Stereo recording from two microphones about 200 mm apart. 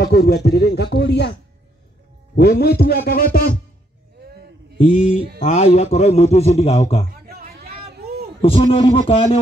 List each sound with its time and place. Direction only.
0.0 s speech: 55° left (ahead or behind)
2.8 s music: 50° left (ahead or behind)
4.7 s a man's voice: 40° left (ahead or behind)
7.2 s vehicle: 50° right (ahead or behind)
8.4 s a man's voice: 30° left (ahead or behind)